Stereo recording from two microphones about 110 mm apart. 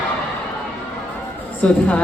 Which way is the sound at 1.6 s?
10° left (ahead or behind).